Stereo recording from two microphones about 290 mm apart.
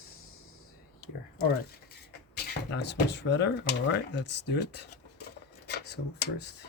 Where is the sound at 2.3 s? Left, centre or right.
Left.